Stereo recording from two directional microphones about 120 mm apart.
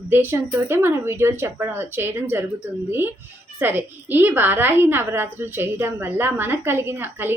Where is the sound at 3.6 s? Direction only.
15° right (ahead or behind).